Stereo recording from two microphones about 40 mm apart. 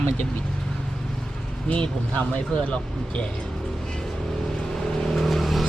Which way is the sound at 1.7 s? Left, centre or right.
Left.